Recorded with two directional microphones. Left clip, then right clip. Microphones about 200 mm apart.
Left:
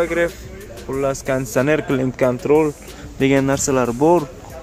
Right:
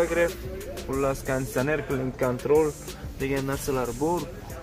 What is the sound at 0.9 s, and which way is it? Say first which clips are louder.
Speech: left 7 dB; 30° left (ahead or behind).